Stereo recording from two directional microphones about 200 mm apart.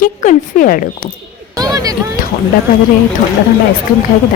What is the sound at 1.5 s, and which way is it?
Speech, 20° right (ahead or behind).